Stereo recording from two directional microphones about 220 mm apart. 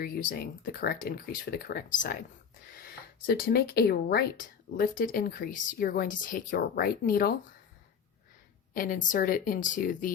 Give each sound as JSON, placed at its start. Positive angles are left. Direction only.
{"t": 0.0, "sound": "speech", "side_deg": 40}
{"t": 8.7, "sound": "speech", "side_deg": 40}